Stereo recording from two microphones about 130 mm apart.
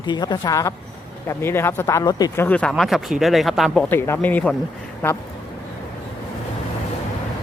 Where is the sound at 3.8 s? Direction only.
15° left (ahead or behind).